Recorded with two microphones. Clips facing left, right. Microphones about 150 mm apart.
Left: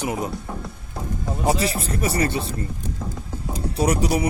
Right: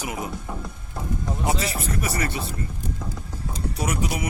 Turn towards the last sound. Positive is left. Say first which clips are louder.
# left 6 dB
turn(degrees=35)  # may be behind; listen again after turning